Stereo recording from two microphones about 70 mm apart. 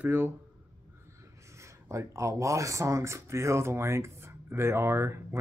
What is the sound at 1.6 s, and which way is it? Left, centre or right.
Speech, right.